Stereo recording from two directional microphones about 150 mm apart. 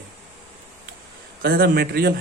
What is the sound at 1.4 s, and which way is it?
Speech, 80° right.